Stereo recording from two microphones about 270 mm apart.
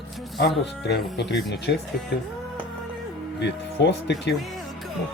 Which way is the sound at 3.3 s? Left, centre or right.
Left.